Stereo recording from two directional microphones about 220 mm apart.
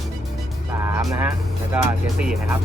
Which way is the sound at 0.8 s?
10° right (ahead or behind).